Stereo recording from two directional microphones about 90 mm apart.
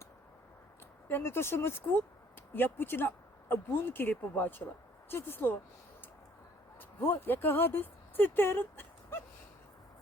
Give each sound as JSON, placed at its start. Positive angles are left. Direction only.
{"t": 1.0, "sound": "speech", "side_deg": 25}
{"t": 7.0, "sound": "speech", "side_deg": 25}